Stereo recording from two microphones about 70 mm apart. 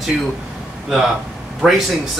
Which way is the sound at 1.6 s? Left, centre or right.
Centre.